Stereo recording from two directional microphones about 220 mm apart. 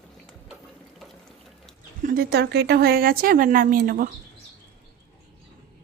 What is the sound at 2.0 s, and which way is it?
A woman's voice, 45° right (ahead or behind).